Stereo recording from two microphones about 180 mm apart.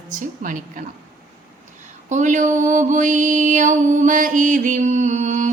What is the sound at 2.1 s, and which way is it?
Mantra, 45° right (ahead or behind).